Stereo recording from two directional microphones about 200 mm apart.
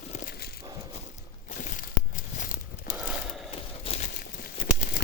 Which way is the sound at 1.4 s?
40° left (ahead or behind).